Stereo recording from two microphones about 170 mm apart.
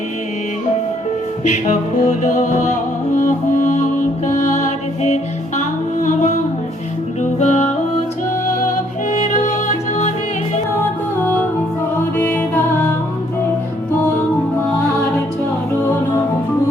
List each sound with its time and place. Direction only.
1.5 s music: 45° left (ahead or behind)
9.1 s music: 45° left (ahead or behind)
11.9 s music: 10° left (ahead or behind)